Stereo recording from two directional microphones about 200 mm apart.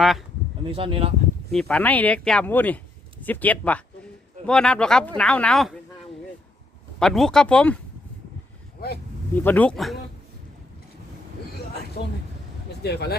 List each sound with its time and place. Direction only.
0.0 s speech: centre (ahead or behind)
0.7 s speech: 25° right (ahead or behind)
1.5 s speech: centre (ahead or behind)
7.0 s speech: centre (ahead or behind)
9.3 s speech: 10° left (ahead or behind)
12.8 s speech: 55° left (ahead or behind)